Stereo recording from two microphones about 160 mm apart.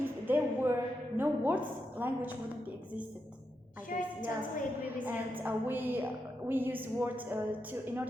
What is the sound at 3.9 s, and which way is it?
Speech, 55° left (ahead or behind).